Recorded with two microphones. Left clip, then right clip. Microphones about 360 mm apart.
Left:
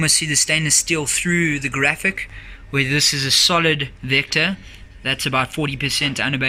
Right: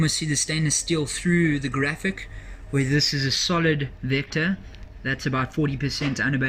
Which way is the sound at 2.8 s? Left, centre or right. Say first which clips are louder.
Left 5 dB; left.